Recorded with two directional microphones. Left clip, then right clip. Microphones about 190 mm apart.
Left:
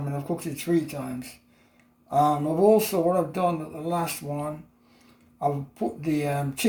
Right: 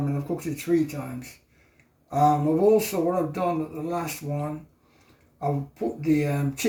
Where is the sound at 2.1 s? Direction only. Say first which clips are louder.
Right 1 dB; 35° left (ahead or behind).